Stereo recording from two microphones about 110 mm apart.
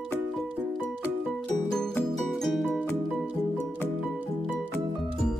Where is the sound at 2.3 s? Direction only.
Centre (ahead or behind).